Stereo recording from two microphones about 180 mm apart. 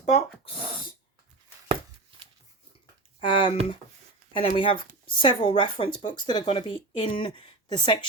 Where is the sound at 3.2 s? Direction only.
25° left (ahead or behind).